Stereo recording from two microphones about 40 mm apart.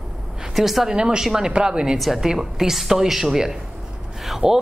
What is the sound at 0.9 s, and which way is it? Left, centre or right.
A woman's voice, right.